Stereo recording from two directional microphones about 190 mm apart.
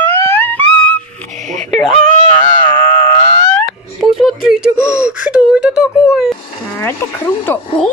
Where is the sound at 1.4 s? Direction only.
40° right (ahead or behind).